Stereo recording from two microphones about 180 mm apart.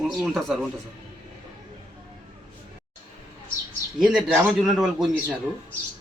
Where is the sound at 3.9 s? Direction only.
5° right (ahead or behind).